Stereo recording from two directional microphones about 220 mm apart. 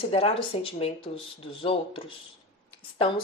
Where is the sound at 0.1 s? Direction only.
25° left (ahead or behind).